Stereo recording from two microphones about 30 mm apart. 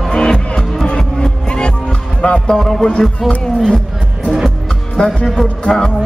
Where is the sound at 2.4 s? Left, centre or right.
Left.